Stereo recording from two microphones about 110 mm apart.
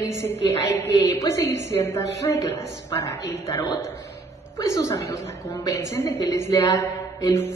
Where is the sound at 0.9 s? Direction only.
30° left (ahead or behind).